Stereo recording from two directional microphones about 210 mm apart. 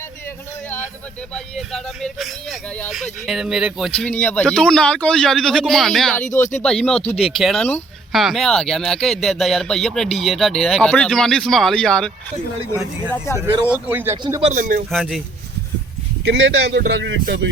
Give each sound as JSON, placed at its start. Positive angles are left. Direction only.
{"t": 1.3, "sound": "a man's voice", "side_deg": 0}
{"t": 13.8, "sound": "speech", "side_deg": -10}
{"t": 14.4, "sound": "speech", "side_deg": -40}
{"t": 14.8, "sound": "a man's voice", "side_deg": 0}
{"t": 16.2, "sound": "speech", "side_deg": -55}